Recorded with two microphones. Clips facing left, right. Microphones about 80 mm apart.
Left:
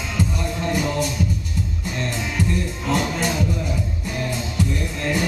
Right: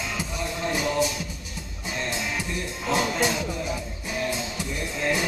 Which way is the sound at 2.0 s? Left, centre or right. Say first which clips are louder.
Left 4 dB; centre.